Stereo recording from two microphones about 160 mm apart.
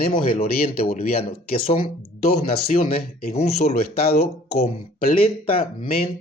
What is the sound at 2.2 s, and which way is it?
Speech, 55° left (ahead or behind).